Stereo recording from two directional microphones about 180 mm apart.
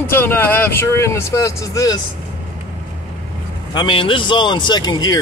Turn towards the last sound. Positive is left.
turn(degrees=25)  # may be behind; listen again after turning